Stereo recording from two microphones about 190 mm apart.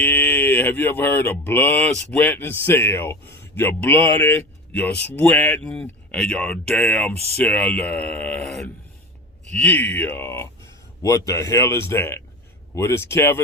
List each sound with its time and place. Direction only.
0.0 s mantra: 10° left (ahead or behind)